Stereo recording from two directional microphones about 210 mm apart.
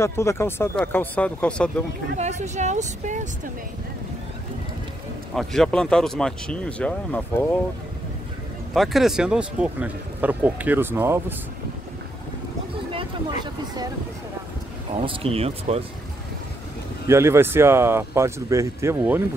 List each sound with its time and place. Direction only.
0.0 s speech: 15° left (ahead or behind)
2.1 s speech: 35° right (ahead or behind)
5.3 s speech: centre (ahead or behind)
8.7 s speech: centre (ahead or behind)
15.0 s speech: 25° right (ahead or behind)
17.1 s speech: 10° right (ahead or behind)